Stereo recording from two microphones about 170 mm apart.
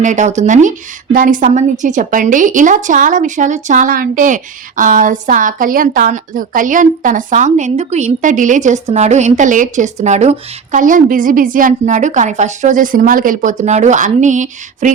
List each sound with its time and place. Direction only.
0.0 s a woman's voice: 45° right (ahead or behind)